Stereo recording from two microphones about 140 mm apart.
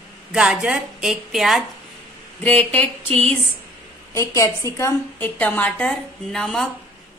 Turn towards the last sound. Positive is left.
turn(degrees=5)  # may be behind; listen again after turning